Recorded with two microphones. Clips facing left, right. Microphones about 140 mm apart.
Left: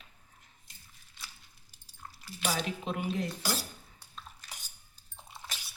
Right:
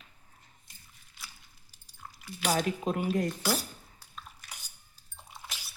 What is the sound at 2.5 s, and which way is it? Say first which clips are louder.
Speech: right 5 dB; 50° right (ahead or behind).